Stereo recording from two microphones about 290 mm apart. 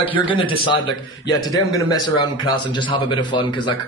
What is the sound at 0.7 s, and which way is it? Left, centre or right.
A man's voice, centre.